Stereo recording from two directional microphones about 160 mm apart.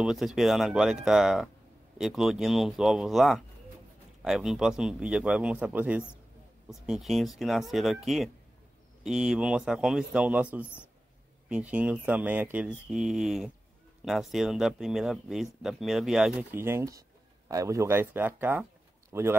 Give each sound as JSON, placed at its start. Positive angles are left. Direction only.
{"t": 0.0, "sound": "a man's voice", "side_deg": 0}